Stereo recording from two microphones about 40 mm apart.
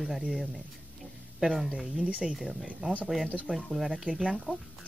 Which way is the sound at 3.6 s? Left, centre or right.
Centre.